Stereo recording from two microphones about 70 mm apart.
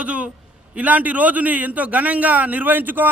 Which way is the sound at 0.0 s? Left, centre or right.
Centre.